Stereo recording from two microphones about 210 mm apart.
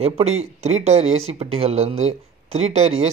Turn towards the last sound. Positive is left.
turn(degrees=-30)  # may be behind; listen again after turning